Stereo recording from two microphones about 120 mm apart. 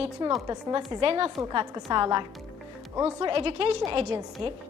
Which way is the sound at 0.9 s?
55° right (ahead or behind).